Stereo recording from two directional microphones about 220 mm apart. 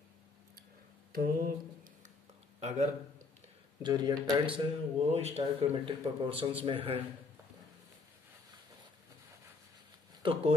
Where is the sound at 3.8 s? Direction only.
20° right (ahead or behind).